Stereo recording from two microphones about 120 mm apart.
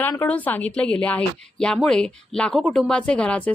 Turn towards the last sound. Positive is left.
turn(degrees=10)  # may be behind; listen again after turning